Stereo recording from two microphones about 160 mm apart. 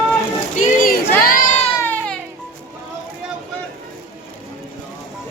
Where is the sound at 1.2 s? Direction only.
60° left (ahead or behind).